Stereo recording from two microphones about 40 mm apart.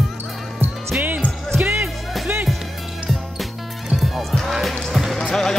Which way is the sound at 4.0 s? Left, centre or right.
Centre.